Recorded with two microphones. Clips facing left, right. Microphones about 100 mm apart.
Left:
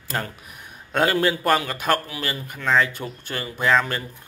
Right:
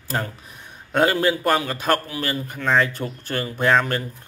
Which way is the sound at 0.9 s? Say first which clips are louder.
Right 2 dB; 25° right (ahead or behind).